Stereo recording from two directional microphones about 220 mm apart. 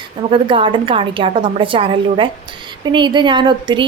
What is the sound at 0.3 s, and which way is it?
Speech, 25° right (ahead or behind).